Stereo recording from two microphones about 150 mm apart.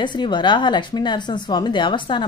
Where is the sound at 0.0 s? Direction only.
30° left (ahead or behind).